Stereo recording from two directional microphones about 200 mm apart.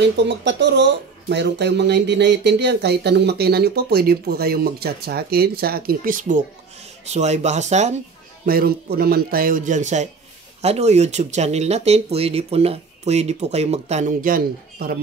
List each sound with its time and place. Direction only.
0.0 s speech: 60° right (ahead or behind); by 7.9 s 35° right (ahead or behind)
8.5 s speech: 50° right (ahead or behind)